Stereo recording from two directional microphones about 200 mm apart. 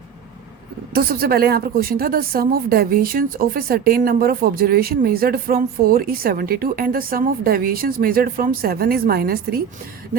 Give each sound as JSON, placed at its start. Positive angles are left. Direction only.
{"t": 0.9, "sound": "a woman's voice", "side_deg": -50}